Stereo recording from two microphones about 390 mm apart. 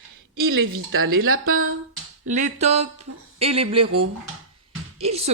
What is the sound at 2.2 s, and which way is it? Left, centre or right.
Speech, centre.